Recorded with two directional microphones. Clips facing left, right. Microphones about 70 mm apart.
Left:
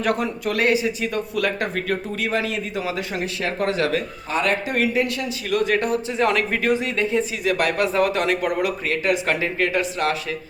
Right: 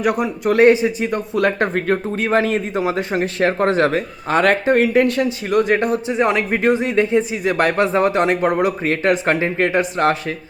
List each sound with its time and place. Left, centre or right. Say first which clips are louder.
0.0 s speech: right 4 dB; centre
0.5 s speech: right 9 dB; right
4.3 s speech: right 8 dB; right
5.5 s speech: right 3 dB; right